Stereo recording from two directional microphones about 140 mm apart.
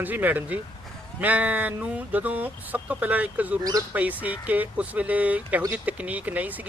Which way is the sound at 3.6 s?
25° right (ahead or behind).